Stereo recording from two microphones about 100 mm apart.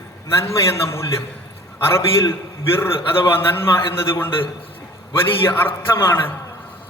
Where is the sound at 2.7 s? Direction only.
20° left (ahead or behind).